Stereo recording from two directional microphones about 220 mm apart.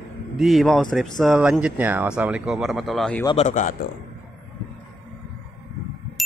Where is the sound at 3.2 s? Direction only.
20° left (ahead or behind).